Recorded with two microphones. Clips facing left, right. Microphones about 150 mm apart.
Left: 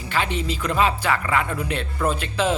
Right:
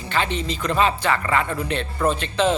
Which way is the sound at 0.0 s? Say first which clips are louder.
Right 1 dB; 10° left (ahead or behind).